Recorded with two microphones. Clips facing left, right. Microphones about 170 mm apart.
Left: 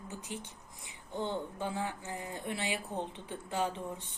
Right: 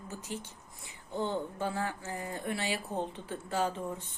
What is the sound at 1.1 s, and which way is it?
Speech, 10° right (ahead or behind).